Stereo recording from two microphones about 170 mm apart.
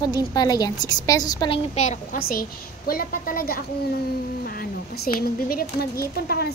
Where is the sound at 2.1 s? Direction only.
60° left (ahead or behind).